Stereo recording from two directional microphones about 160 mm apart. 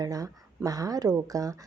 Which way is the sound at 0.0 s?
20° right (ahead or behind).